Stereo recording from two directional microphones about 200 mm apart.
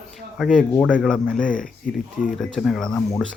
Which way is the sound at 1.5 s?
45° left (ahead or behind).